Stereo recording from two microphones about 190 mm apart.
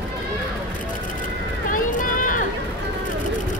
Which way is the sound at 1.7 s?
45° left (ahead or behind).